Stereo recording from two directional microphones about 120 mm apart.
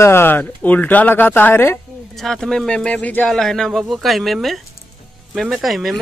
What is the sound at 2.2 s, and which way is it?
Speech, 5° left (ahead or behind).